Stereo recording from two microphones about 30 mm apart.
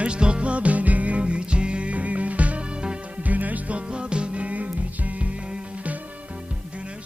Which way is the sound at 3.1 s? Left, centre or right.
Right.